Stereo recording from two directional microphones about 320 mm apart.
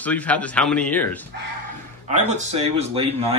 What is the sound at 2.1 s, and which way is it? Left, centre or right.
Speech, right.